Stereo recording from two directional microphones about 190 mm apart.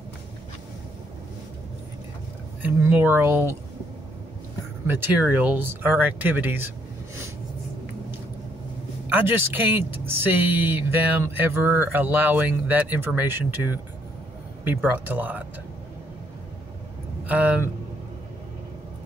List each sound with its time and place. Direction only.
2.6 s speech: 10° right (ahead or behind)
4.8 s speech: 10° right (ahead or behind)
9.1 s speech: 10° right (ahead or behind)
17.3 s speech: 10° right (ahead or behind)